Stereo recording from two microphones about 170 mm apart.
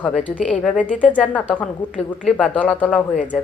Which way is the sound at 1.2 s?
10° left (ahead or behind).